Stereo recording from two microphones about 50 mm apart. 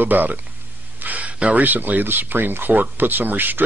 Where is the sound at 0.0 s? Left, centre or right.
Right.